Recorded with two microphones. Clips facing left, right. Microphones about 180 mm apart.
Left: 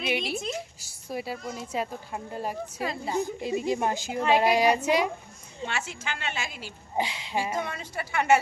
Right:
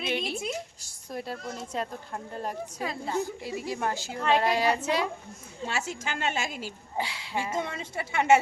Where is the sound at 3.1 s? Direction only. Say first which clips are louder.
Left 3 dB; 20° left (ahead or behind).